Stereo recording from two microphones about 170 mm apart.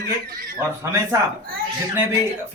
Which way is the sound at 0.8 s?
15° right (ahead or behind).